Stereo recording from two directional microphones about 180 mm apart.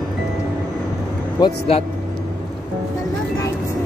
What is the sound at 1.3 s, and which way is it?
Speech, 30° left (ahead or behind).